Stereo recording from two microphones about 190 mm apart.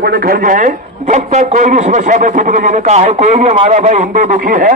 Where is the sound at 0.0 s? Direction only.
50° right (ahead or behind).